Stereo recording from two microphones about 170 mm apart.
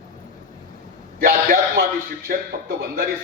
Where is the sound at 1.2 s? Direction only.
60° right (ahead or behind).